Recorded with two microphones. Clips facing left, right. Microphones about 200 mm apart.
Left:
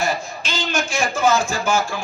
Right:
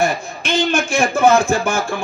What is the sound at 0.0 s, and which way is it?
A man's voice, 55° right (ahead or behind).